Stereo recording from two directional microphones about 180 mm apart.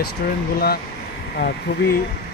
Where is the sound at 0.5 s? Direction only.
60° left (ahead or behind).